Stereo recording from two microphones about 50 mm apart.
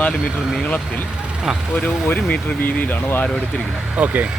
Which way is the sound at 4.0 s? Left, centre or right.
Right.